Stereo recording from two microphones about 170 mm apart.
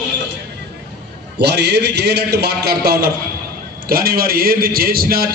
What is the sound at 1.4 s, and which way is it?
A man's voice, 80° right.